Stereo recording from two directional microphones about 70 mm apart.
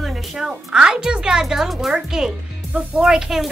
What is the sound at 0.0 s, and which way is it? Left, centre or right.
A woman's voice, centre.